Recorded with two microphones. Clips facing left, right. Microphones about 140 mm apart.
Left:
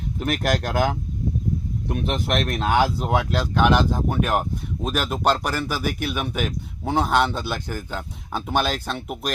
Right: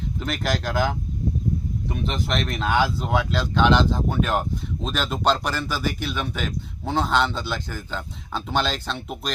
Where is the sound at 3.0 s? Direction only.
10° left (ahead or behind).